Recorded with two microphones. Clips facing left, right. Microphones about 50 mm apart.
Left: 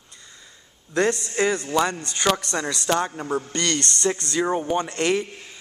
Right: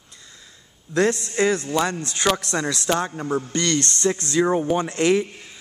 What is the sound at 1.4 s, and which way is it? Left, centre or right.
A man's voice, centre.